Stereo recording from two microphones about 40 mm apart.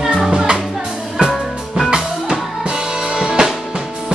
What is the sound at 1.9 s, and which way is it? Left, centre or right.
Music, centre.